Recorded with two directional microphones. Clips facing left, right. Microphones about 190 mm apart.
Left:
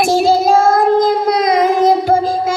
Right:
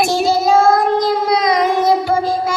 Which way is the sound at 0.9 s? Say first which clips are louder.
Left 3 dB; 50° left (ahead or behind).